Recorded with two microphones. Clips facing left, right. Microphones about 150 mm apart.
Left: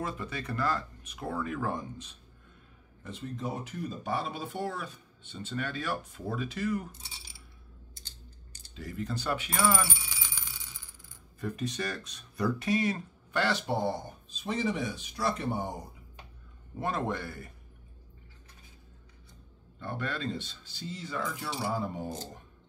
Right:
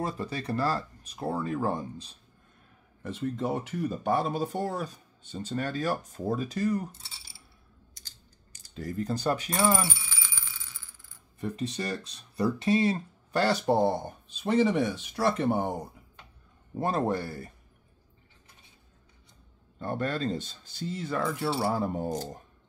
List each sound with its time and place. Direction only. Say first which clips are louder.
0.0 s speech: right 4 dB; 35° right (ahead or behind)
3.0 s speech: right 7 dB; 60° right (ahead or behind); by 6.9 s 35° right (ahead or behind)
8.7 s speech: right 5 dB; 40° right (ahead or behind)
10.0 s coin: right 1 dB; 15° left (ahead or behind)
11.3 s speech: right 2 dB; 25° right (ahead or behind); by 15.7 s 60° right (ahead or behind)
16.7 s speech: right 5 dB; 35° right (ahead or behind)
19.8 s speech: right 5 dB; 45° right (ahead or behind)